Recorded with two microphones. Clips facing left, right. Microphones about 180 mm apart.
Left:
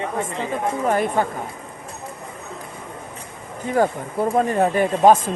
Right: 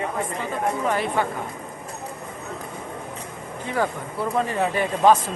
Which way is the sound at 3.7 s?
45° left (ahead or behind).